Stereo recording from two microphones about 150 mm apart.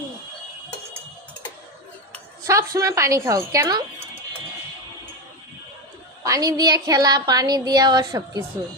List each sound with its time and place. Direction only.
2.5 s speech: 20° right (ahead or behind)
6.2 s speech: 25° right (ahead or behind)